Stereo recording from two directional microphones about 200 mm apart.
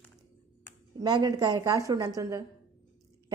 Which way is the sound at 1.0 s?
20° right (ahead or behind).